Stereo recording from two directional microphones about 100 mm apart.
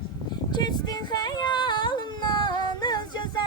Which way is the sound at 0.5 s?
45° left (ahead or behind).